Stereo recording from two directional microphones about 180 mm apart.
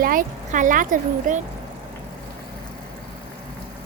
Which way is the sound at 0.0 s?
50° right (ahead or behind).